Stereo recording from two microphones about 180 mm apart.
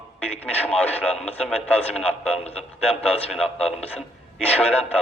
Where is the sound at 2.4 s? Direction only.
35° left (ahead or behind).